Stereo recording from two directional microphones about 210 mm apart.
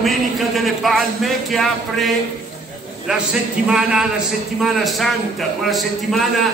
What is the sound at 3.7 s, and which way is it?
A man's voice, 5° right (ahead or behind).